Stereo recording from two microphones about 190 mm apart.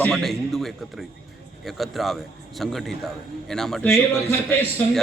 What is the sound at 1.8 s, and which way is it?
Speech, centre (ahead or behind).